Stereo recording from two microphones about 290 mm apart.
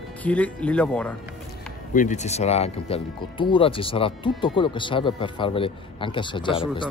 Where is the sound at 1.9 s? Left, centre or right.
Left.